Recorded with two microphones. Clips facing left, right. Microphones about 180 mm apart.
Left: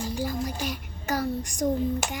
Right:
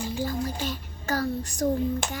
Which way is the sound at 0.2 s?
15° left (ahead or behind).